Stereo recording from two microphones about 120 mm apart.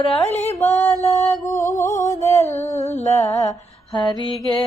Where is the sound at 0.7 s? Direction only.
20° left (ahead or behind).